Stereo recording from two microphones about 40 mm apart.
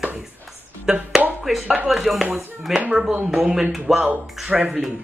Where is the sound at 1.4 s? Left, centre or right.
Centre.